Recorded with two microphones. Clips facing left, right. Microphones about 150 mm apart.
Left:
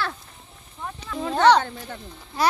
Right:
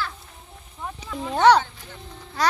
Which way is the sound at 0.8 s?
10° right (ahead or behind).